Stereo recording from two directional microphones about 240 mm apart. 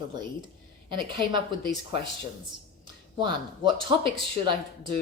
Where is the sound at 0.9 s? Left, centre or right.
Centre.